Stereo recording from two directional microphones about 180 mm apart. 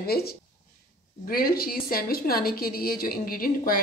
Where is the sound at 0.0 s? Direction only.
60° left (ahead or behind).